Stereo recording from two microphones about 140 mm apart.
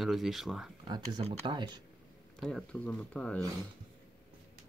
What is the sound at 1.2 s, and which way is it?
Speech, 35° right (ahead or behind).